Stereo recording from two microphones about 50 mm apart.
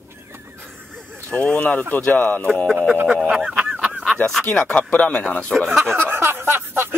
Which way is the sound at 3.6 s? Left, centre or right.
Centre.